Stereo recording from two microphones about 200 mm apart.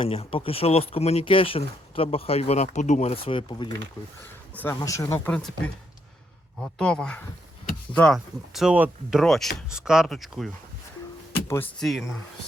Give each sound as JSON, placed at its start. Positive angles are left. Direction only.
{"t": 0.0, "sound": "speech", "side_deg": 30}
{"t": 4.5, "sound": "speech", "side_deg": 10}
{"t": 6.6, "sound": "speech", "side_deg": 5}
{"t": 11.3, "sound": "a sound", "side_deg": 10}
{"t": 11.8, "sound": "speech", "side_deg": 0}